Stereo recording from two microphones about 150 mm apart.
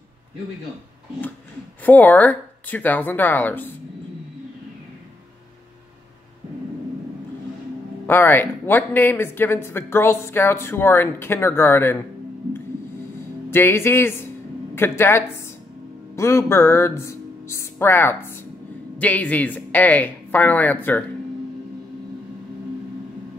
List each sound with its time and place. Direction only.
1.9 s speech: 10° left (ahead or behind)
8.1 s speech: 15° left (ahead or behind)
13.5 s speech: 15° left (ahead or behind)